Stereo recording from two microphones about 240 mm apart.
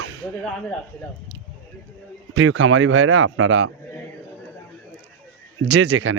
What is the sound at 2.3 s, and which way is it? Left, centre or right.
Speech, right.